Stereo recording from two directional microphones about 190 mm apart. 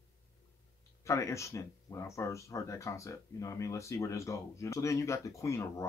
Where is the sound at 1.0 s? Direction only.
15° left (ahead or behind).